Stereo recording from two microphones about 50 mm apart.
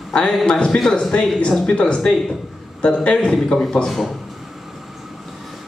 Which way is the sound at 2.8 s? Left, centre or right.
Left.